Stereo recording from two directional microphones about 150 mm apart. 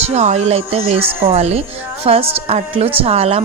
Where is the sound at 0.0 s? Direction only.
50° right (ahead or behind).